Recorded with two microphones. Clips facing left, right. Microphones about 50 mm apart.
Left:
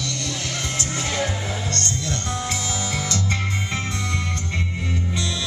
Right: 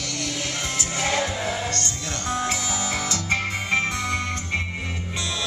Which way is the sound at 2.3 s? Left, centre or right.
Centre.